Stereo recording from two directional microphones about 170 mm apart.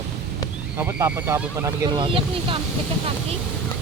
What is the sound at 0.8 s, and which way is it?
Speech, 10° right (ahead or behind).